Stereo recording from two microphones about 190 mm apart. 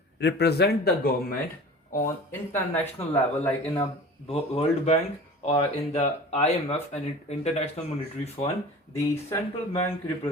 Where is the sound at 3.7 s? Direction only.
30° left (ahead or behind).